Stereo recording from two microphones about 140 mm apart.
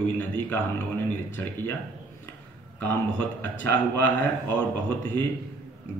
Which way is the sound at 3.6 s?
15° left (ahead or behind).